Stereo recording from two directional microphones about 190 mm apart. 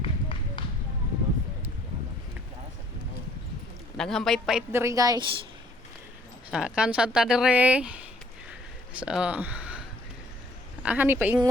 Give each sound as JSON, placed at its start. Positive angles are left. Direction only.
{"t": 0.0, "sound": "run", "side_deg": 25}
{"t": 3.9, "sound": "a woman's voice", "side_deg": 0}
{"t": 4.7, "sound": "a woman's voice", "side_deg": -15}
{"t": 6.5, "sound": "a woman's voice", "side_deg": -5}
{"t": 9.0, "sound": "speech", "side_deg": -5}
{"t": 10.8, "sound": "a woman's voice", "side_deg": -10}